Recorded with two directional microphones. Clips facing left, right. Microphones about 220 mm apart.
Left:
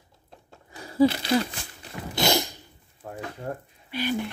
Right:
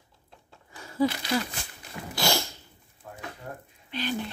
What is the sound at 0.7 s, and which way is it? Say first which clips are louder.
Speech: left 5 dB; 35° left (ahead or behind).